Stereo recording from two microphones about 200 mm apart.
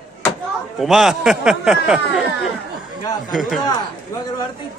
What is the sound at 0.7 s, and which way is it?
Speech, centre (ahead or behind).